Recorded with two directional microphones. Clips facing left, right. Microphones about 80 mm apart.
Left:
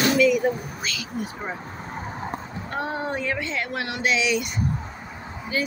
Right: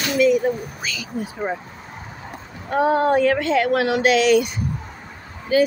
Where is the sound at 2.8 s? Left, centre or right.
Right.